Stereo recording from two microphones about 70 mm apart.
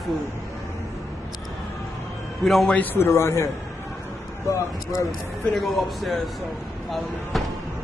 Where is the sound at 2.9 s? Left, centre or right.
Left.